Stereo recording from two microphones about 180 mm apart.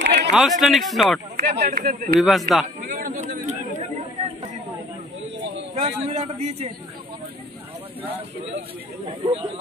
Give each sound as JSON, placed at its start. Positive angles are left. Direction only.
{"t": 0.0, "sound": "a sound", "side_deg": -70}
{"t": 0.3, "sound": "speech", "side_deg": 0}
{"t": 1.3, "sound": "speech", "side_deg": -60}
{"t": 2.1, "sound": "speech", "side_deg": 0}
{"t": 2.9, "sound": "a sound", "side_deg": -50}
{"t": 5.8, "sound": "a man's voice", "side_deg": -35}
{"t": 9.0, "sound": "a man's voice", "side_deg": -30}